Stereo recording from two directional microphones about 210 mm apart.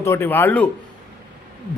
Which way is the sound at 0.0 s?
10° left (ahead or behind).